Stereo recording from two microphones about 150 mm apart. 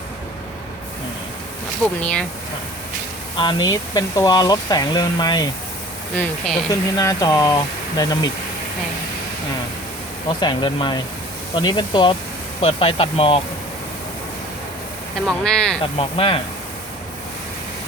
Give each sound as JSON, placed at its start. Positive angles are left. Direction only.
{"t": 2.0, "sound": "speech", "side_deg": 5}
{"t": 3.4, "sound": "speech", "side_deg": 25}
{"t": 6.1, "sound": "speech", "side_deg": 5}
{"t": 6.7, "sound": "speech", "side_deg": 25}
{"t": 10.2, "sound": "speech", "side_deg": 35}
{"t": 15.3, "sound": "speech", "side_deg": 5}
{"t": 16.0, "sound": "speech", "side_deg": 40}